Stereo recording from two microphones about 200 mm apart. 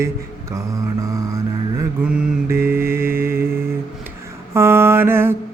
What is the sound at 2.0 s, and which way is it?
Mantra, 10° right (ahead or behind).